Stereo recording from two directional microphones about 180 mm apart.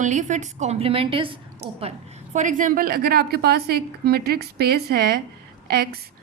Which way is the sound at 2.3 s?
45° right (ahead or behind).